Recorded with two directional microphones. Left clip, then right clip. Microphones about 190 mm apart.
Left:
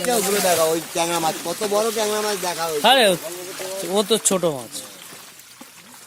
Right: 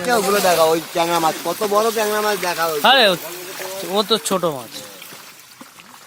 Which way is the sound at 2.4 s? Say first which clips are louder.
Right 4 dB; 30° right (ahead or behind).